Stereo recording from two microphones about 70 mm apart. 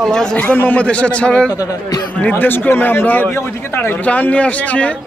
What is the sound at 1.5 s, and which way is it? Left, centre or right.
Speech, left.